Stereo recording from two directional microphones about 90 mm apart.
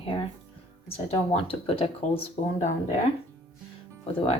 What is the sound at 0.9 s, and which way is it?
Speech, 90° left.